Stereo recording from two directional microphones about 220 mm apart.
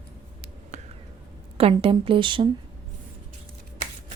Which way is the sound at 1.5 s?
25° right (ahead or behind).